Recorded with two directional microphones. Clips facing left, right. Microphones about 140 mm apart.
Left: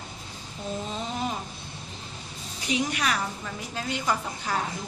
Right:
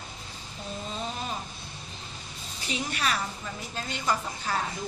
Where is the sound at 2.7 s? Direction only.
15° left (ahead or behind).